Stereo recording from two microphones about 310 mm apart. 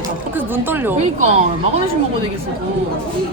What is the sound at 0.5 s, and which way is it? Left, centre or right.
Speech, centre.